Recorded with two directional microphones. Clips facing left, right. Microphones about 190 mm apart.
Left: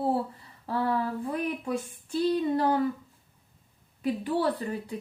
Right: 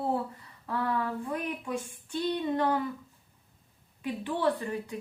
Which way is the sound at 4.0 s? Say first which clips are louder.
Left 4 dB; 40° left (ahead or behind).